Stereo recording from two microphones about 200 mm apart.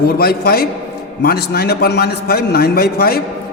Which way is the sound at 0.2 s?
50° left (ahead or behind).